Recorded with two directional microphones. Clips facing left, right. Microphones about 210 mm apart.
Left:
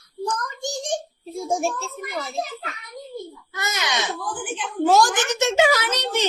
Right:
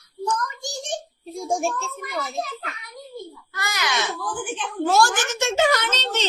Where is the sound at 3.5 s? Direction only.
20° left (ahead or behind).